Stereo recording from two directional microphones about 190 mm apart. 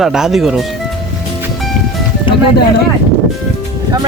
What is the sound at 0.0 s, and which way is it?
Speech, centre (ahead or behind).